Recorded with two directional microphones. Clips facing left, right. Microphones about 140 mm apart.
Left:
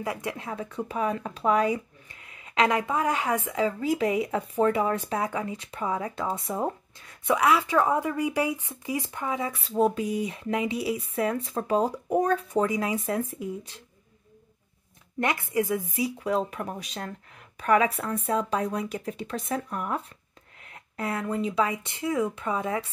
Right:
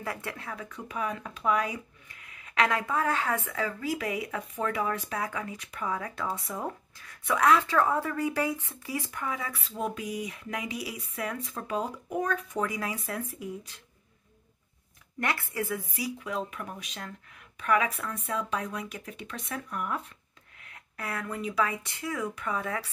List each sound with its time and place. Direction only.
0.0 s speech: 15° left (ahead or behind)
7.3 s speech: 10° left (ahead or behind)
9.7 s speech: 35° left (ahead or behind)
15.1 s speech: 20° left (ahead or behind)
16.2 s speech: 35° left (ahead or behind)